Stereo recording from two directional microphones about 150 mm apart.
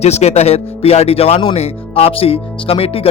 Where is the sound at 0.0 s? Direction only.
45° left (ahead or behind).